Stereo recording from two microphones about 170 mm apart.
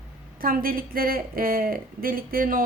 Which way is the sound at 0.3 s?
60° right (ahead or behind).